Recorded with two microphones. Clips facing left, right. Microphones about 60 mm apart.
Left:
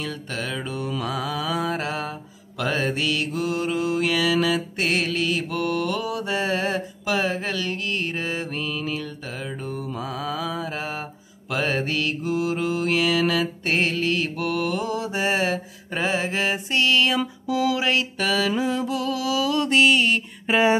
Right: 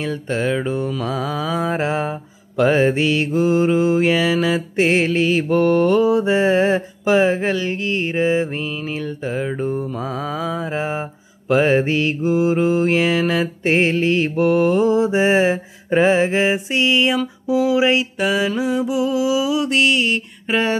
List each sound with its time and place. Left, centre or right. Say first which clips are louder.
0.0 s mantra: right 8 dB; right; by 19.6 s centre
19.6 s mantra: right 1 dB; centre